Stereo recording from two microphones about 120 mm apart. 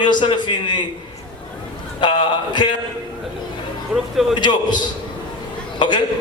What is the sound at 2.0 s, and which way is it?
Speech, 40° left (ahead or behind).